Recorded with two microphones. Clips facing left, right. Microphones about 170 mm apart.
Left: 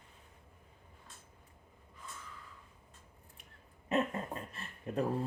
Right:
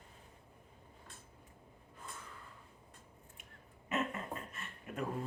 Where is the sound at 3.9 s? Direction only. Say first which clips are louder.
Left 5 dB; 35° left (ahead or behind).